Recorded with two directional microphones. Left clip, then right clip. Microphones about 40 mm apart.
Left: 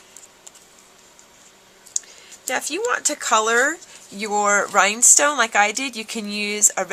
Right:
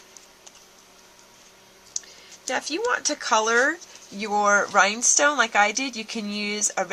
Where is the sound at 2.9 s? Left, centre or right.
Left.